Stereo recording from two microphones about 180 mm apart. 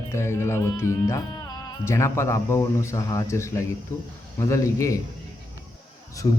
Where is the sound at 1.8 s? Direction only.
15° left (ahead or behind).